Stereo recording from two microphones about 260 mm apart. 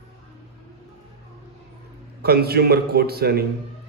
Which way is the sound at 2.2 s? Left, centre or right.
Right.